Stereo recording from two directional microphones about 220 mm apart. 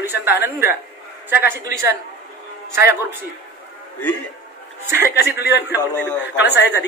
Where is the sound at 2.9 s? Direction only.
10° right (ahead or behind).